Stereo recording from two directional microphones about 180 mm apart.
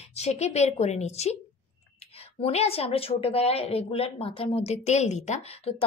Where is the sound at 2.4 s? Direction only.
35° left (ahead or behind).